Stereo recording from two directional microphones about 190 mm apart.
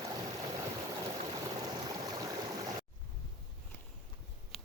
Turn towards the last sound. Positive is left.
turn(degrees=0)  # may be behind; listen again after turning